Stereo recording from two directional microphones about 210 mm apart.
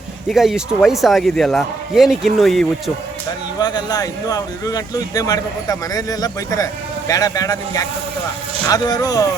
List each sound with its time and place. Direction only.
0.3 s a man's voice: centre (ahead or behind)
3.6 s speech: 20° left (ahead or behind)